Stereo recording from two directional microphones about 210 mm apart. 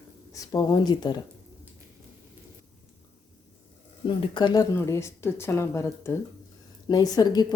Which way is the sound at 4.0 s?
20° left (ahead or behind).